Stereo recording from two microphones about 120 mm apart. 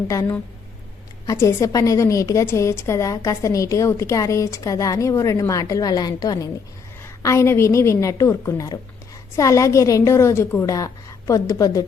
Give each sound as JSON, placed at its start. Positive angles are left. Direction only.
{"t": 1.3, "sound": "a woman's voice", "side_deg": 20}